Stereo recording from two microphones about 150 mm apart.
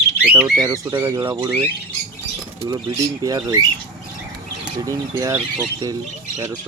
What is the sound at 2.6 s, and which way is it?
Speech, 25° right (ahead or behind).